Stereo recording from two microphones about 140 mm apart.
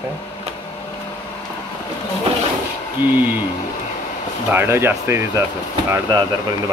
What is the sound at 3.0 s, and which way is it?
Speech, 15° right (ahead or behind).